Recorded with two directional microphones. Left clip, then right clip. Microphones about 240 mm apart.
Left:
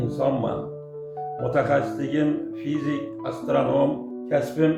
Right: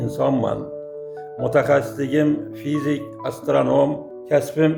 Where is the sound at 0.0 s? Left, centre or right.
Right.